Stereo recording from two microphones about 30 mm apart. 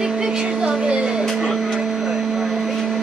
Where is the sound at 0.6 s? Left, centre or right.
Right.